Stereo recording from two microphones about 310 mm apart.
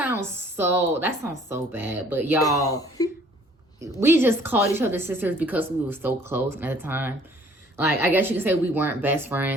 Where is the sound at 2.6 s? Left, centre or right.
Centre.